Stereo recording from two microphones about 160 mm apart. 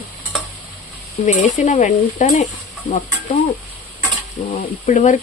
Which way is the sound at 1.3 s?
45° left (ahead or behind).